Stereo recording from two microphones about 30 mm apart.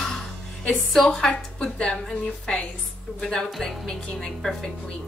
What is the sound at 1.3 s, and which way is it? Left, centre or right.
Speech, left.